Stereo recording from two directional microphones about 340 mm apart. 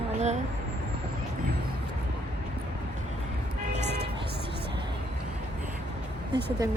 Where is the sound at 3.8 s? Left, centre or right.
Right.